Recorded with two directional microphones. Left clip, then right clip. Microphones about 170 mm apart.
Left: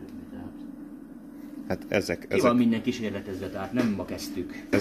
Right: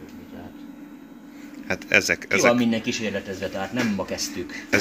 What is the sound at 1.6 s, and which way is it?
Speech, 15° left (ahead or behind).